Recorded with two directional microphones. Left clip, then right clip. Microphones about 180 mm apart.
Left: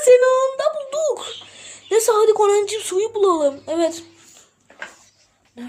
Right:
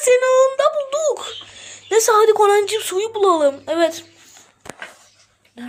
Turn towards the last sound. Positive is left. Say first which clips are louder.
# right 1 dB
turn(degrees=25)  # may be behind; listen again after turning